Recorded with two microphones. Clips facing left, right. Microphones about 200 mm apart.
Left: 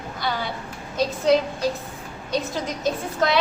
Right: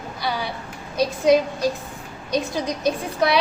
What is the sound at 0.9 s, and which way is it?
A woman's voice, 15° right (ahead or behind).